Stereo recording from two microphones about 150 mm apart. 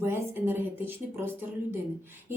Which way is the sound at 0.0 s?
15° right (ahead or behind).